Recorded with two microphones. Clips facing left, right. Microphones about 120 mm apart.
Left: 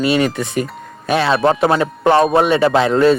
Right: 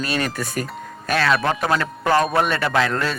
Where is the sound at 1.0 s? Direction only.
20° left (ahead or behind).